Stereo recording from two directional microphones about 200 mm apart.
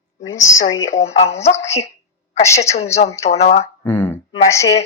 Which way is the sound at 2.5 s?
30° left (ahead or behind).